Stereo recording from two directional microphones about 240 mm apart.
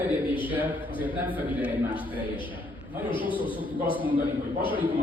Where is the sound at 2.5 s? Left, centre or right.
Centre.